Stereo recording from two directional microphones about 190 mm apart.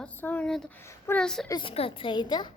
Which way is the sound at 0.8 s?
15° left (ahead or behind).